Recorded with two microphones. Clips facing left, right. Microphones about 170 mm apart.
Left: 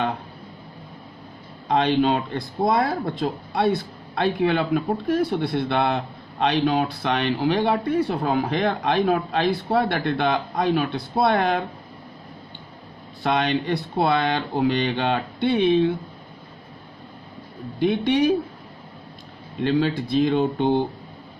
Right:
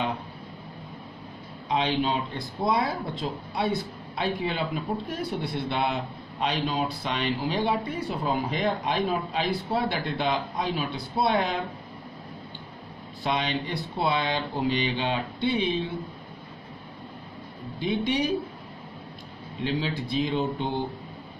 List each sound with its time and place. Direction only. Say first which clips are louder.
1.7 s speech: left 6 dB; 60° left (ahead or behind)
13.2 s speech: left 6 dB; 65° left (ahead or behind)
17.7 s speech: left 6 dB; 60° left (ahead or behind)
19.6 s speech: left 7 dB; 65° left (ahead or behind)